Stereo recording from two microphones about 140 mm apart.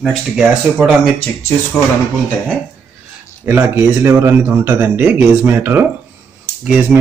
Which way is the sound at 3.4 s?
15° right (ahead or behind).